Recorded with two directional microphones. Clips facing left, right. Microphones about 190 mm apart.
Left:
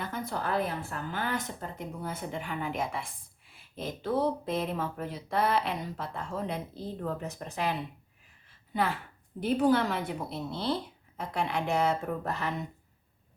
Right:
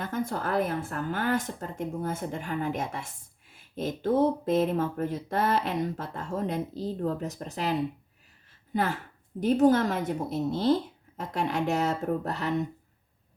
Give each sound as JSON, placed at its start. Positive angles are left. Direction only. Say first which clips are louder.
{"t": 0.0, "sound": "a woman's voice", "louder": "right 4 dB", "side_deg": -50}